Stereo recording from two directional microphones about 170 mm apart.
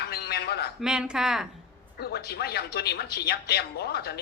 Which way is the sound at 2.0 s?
70° left (ahead or behind).